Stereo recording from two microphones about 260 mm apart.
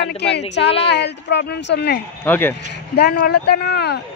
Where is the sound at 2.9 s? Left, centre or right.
Left.